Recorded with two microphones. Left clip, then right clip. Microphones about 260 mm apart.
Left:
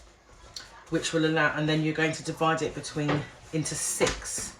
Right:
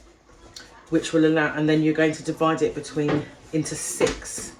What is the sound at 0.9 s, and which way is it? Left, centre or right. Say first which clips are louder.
Speech: right 6 dB; centre.